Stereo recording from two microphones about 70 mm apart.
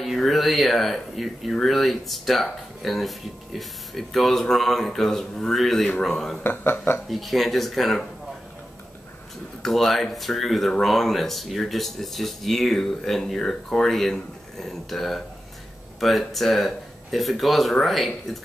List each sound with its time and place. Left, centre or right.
0.0 s speech: centre
6.4 s speech: left
7.1 s speech: centre
9.6 s speech: centre